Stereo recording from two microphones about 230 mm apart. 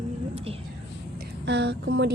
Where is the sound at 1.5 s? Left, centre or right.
Right.